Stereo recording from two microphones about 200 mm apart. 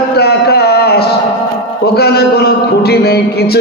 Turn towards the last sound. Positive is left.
turn(degrees=50)  # may be behind; listen again after turning